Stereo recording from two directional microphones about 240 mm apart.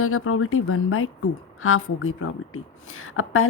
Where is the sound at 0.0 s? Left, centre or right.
Left.